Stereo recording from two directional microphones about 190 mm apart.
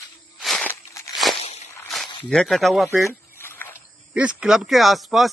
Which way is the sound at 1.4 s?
35° left (ahead or behind).